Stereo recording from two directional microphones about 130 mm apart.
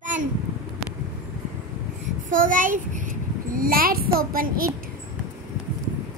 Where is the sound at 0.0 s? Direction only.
75° right (ahead or behind).